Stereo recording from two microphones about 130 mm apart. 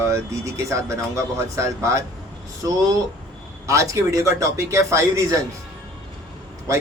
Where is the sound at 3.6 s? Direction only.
25° right (ahead or behind).